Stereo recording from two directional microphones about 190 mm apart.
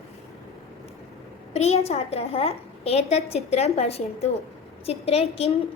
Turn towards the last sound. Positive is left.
turn(degrees=30)  # may be behind; listen again after turning